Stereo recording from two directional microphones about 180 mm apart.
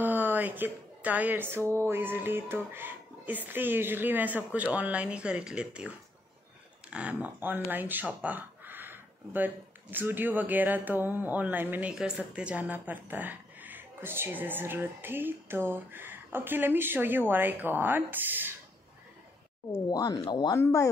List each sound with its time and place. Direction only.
0.0 s music: 10° right (ahead or behind)
1.7 s speech: 15° right (ahead or behind)
19.7 s speech: 20° left (ahead or behind)